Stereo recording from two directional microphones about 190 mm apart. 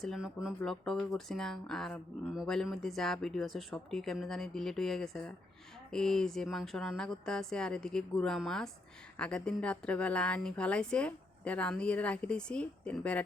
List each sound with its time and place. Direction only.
0.0 s speech: centre (ahead or behind)